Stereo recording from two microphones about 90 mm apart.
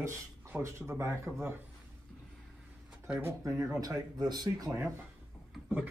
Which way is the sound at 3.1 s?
25° right (ahead or behind).